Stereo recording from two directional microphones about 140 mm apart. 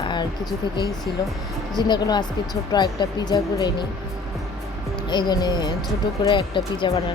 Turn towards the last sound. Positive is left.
turn(degrees=35)  # may be behind; listen again after turning